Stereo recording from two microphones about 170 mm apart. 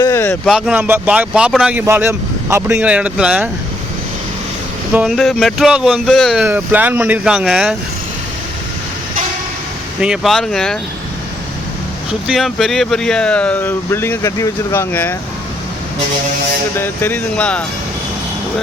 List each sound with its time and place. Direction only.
0.0 s a sound: 15° left (ahead or behind)
0.4 s speech: 5° right (ahead or behind)
4.9 s speech: centre (ahead or behind)
10.0 s speech: centre (ahead or behind)
12.3 s speech: centre (ahead or behind)
16.7 s speech: 10° left (ahead or behind)